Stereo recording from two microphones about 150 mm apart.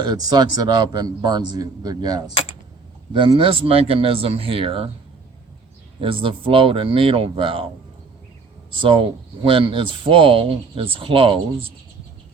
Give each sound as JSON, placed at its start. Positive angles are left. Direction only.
{"t": 0.0, "sound": "a man's voice", "side_deg": -25}
{"t": 2.3, "sound": "a sound", "side_deg": 40}
{"t": 3.1, "sound": "speech", "side_deg": -35}
{"t": 6.0, "sound": "speech", "side_deg": -35}
{"t": 8.8, "sound": "speech", "side_deg": -35}